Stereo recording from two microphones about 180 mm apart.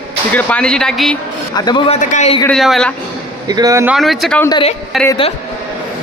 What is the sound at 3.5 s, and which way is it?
Speech, 20° right (ahead or behind).